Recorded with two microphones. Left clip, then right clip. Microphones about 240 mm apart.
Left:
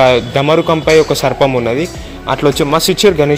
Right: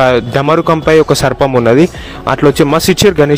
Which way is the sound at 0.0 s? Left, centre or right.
Right.